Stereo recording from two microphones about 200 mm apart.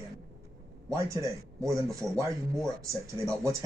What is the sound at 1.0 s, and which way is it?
Speech, 15° right (ahead or behind).